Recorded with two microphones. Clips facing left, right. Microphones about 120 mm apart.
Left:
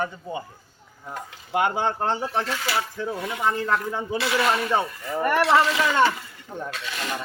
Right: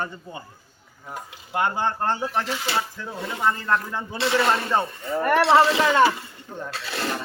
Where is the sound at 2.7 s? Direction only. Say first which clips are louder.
Left 1 dB; 25° right (ahead or behind).